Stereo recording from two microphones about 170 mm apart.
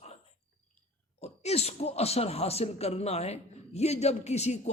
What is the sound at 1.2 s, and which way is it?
Speech, 40° left (ahead or behind).